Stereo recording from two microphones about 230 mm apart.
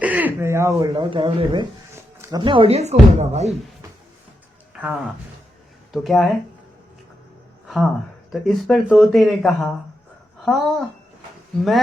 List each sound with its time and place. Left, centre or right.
0.0 s speech: centre; by 3.5 s right
4.7 s speech: centre
8.3 s speech: centre